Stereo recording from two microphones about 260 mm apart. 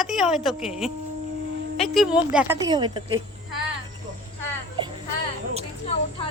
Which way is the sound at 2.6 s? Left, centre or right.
Centre.